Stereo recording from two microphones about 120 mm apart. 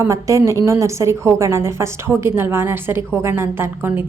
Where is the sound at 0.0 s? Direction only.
25° right (ahead or behind).